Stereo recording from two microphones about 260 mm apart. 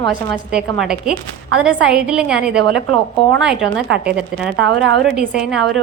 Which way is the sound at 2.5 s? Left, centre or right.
Right.